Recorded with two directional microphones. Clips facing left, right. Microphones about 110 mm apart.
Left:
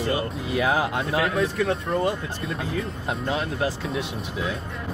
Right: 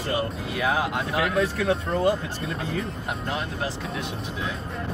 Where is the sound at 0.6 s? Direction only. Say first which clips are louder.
Left 1 dB; 20° left (ahead or behind).